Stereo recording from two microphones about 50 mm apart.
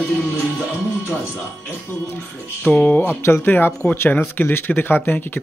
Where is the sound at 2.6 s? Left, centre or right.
Left.